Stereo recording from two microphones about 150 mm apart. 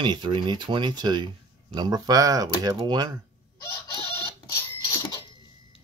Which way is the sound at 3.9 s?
35° left (ahead or behind).